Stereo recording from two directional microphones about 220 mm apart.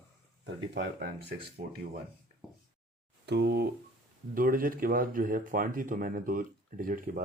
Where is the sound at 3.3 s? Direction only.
50° right (ahead or behind).